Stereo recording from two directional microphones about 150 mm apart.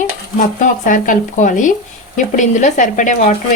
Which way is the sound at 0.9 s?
65° left (ahead or behind).